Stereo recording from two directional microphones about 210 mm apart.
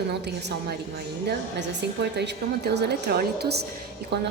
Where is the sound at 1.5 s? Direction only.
55° right (ahead or behind).